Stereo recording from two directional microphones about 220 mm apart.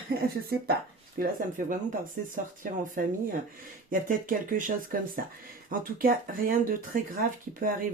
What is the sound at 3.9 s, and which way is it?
Speech, 40° right (ahead or behind).